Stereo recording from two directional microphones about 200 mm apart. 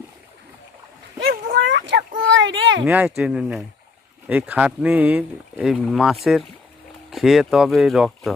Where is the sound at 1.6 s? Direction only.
65° right (ahead or behind).